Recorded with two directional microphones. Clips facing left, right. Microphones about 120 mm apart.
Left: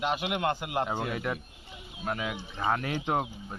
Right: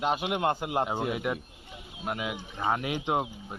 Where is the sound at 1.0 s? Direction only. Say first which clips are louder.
Right 2 dB; 15° right (ahead or behind).